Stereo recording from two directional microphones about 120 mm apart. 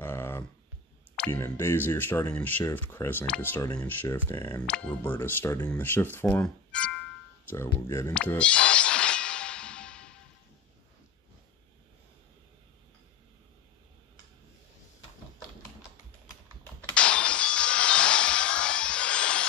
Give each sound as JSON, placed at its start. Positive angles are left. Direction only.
{"t": 0.0, "sound": "a sound", "side_deg": 20}
{"t": 1.3, "sound": "speech", "side_deg": 20}
{"t": 4.6, "sound": "speech", "side_deg": 10}
{"t": 8.4, "sound": "music", "side_deg": 10}
{"t": 16.9, "sound": "music", "side_deg": 10}